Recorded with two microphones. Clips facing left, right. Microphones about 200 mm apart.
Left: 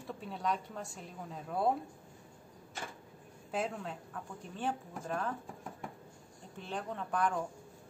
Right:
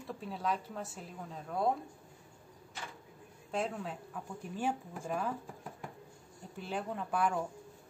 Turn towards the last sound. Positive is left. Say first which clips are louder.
# right 1 dB
turn(degrees=-5)  # may be behind; listen again after turning